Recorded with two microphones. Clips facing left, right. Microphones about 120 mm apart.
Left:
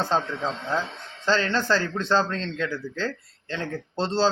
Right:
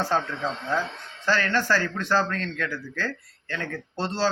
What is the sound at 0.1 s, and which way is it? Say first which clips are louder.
A man's voice: left 1 dB; 20° left (ahead or behind).